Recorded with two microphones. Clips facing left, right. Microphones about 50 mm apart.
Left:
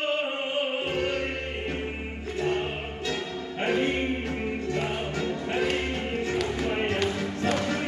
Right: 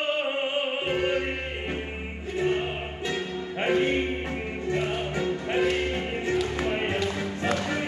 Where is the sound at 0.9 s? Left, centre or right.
Centre.